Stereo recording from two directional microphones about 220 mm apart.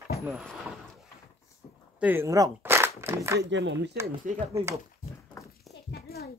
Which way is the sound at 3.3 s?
55° right (ahead or behind).